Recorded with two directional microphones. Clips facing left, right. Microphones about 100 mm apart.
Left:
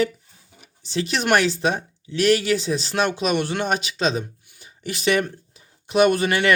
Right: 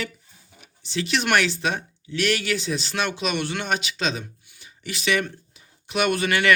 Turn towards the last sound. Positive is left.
turn(degrees=35)  # may be behind; listen again after turning